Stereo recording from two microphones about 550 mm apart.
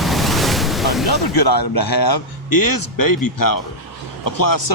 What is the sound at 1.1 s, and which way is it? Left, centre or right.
A man's voice, left.